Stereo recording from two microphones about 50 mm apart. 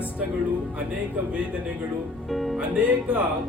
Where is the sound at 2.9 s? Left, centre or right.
Centre.